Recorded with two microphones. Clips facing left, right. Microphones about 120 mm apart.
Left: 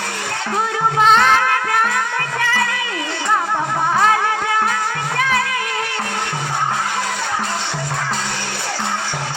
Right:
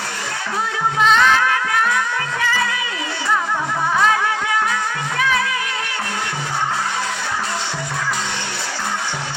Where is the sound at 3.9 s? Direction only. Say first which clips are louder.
Left 1 dB; 45° left (ahead or behind).